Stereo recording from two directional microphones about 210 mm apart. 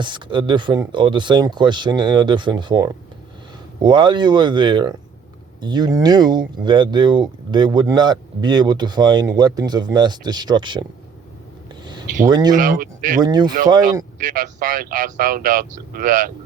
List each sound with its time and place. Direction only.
0.0 s speech: 20° right (ahead or behind)
12.2 s speech: 20° right (ahead or behind)
12.5 s speech: 40° right (ahead or behind)
13.2 s speech: 20° right (ahead or behind)
14.2 s speech: 40° right (ahead or behind)